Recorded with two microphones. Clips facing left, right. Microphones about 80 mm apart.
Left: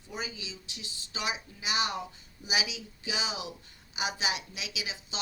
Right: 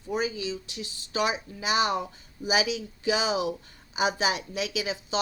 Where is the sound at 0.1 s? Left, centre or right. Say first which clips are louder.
Right 11 dB; right.